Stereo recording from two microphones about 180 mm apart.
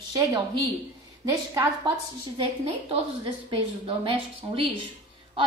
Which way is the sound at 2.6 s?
35° right (ahead or behind).